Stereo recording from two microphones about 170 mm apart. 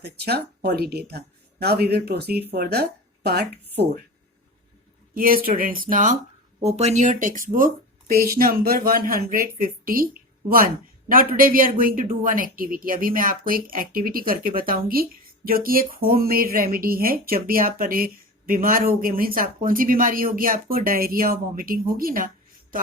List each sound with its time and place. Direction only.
0.0 s speech: 70° right (ahead or behind)
5.1 s speech: 60° right (ahead or behind)
6.6 s speech: 40° right (ahead or behind); by 22.3 s 55° right (ahead or behind)